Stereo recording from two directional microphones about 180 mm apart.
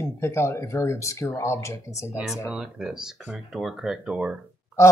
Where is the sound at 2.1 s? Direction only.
5° right (ahead or behind).